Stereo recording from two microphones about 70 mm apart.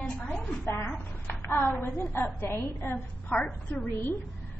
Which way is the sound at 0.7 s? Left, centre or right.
Left.